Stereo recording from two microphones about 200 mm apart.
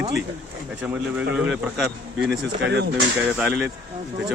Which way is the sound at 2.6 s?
60° right (ahead or behind).